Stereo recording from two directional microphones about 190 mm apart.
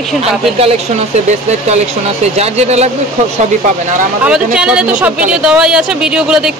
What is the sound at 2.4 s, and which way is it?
Speech, 35° right (ahead or behind).